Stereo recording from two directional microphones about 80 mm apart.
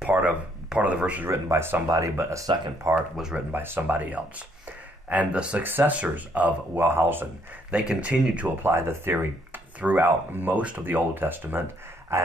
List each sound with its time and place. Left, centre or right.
0.0 s a sound: centre
0.7 s speech: centre
1.3 s speech: right; by 5.6 s centre
5.6 s speech: right
7.7 s speech: centre
8.6 s speech: right